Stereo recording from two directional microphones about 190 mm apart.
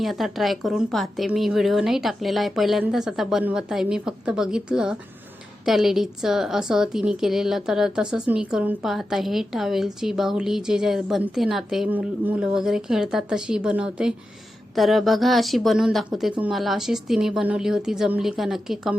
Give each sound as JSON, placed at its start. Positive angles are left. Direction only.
{"t": 0.0, "sound": "a woman's voice", "side_deg": 0}